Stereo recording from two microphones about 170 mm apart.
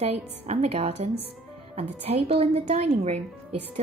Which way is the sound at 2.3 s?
35° right (ahead or behind).